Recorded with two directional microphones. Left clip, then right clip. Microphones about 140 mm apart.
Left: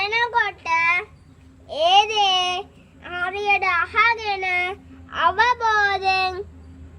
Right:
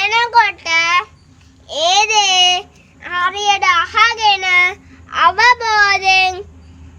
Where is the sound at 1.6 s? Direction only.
15° left (ahead or behind).